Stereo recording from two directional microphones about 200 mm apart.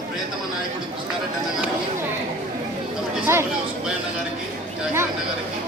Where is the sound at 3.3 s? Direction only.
15° right (ahead or behind).